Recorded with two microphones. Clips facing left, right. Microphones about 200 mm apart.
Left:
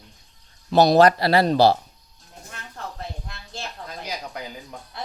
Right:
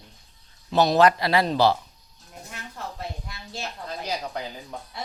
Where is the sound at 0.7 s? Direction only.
35° left (ahead or behind).